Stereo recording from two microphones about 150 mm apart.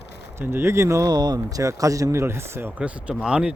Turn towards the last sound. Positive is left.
turn(degrees=-5)  # may be behind; listen again after turning